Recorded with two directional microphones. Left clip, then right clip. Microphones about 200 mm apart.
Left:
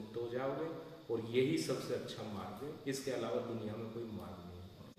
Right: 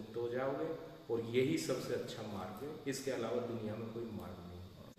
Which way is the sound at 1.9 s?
5° right (ahead or behind).